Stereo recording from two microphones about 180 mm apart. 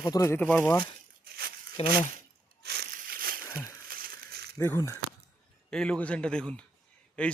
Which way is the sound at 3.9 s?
55° right (ahead or behind).